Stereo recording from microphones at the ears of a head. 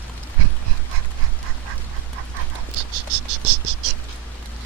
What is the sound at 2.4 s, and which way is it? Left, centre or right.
Cricket, right.